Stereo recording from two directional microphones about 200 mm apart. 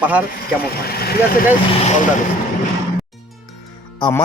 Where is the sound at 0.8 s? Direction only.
50° left (ahead or behind).